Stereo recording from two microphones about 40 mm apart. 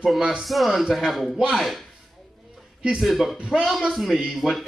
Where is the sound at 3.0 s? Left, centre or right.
Centre.